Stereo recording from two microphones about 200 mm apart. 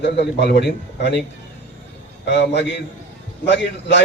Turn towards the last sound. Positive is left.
turn(degrees=60)  # may be behind; listen again after turning